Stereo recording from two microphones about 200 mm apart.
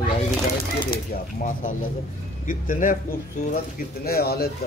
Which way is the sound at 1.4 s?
40° left (ahead or behind).